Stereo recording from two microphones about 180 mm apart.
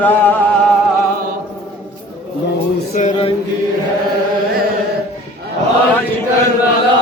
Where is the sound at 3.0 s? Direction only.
35° left (ahead or behind).